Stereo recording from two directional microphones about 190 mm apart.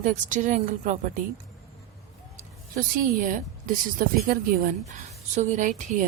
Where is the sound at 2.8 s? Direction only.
45° right (ahead or behind).